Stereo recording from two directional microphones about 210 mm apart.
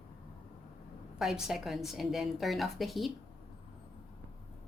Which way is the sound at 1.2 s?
Centre (ahead or behind).